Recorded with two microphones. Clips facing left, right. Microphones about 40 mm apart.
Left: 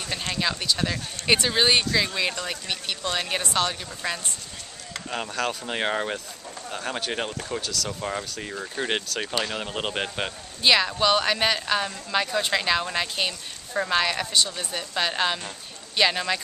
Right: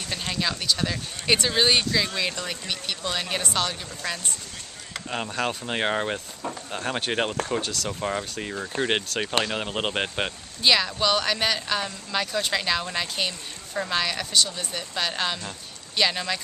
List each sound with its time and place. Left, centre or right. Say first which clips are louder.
0.1 s speech: left 1 dB; centre
4.9 s a sound: right 1 dB; centre
5.3 s a man's voice: even; centre
8.0 s a man's voice: right 2 dB; centre
10.6 s speech: left 1 dB; centre